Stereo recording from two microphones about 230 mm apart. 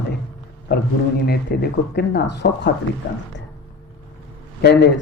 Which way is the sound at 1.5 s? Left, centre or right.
Left.